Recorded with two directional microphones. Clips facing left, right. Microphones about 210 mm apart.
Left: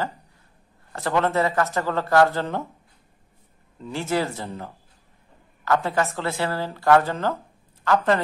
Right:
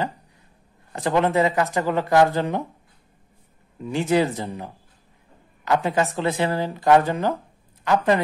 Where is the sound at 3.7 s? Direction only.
15° right (ahead or behind).